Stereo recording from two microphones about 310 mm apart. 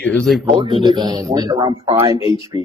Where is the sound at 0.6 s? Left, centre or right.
Centre.